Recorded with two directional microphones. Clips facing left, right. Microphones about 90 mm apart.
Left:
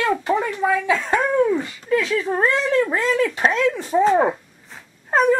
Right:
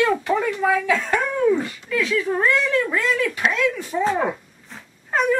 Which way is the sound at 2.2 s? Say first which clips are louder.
Even; 35° left (ahead or behind).